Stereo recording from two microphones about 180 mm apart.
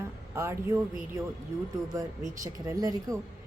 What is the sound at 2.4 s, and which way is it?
Speech, 20° right (ahead or behind).